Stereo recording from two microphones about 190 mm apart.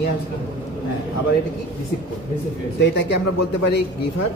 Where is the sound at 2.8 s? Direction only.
65° left (ahead or behind).